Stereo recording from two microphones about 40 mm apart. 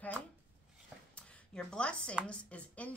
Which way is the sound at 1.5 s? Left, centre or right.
Left.